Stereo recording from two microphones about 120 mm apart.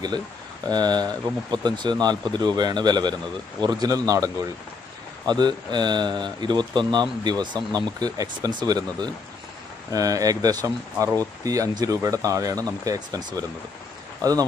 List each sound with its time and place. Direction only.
0.7 s speech: 35° right (ahead or behind)